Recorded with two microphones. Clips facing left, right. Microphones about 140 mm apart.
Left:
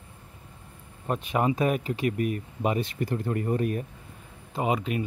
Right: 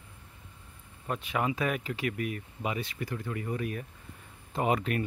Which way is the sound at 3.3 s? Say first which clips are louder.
Left 7 dB; 45° left (ahead or behind).